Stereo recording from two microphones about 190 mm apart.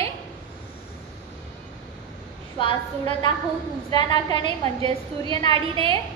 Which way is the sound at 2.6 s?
25° left (ahead or behind).